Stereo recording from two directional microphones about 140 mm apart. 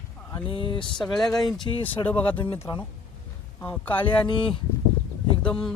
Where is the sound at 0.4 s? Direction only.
40° left (ahead or behind).